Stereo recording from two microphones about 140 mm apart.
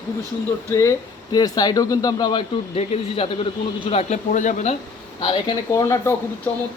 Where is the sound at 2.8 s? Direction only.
45° left (ahead or behind); by 4.7 s 60° left (ahead or behind).